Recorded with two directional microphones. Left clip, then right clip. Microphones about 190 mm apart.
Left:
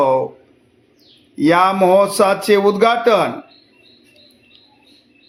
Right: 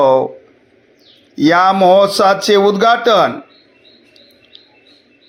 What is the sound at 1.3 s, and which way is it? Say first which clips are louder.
Mantra: right 3 dB; 15° right (ahead or behind).